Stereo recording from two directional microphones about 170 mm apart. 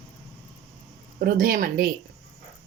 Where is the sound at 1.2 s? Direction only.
60° right (ahead or behind).